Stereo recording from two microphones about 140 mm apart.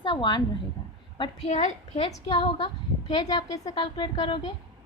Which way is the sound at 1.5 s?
55° left (ahead or behind).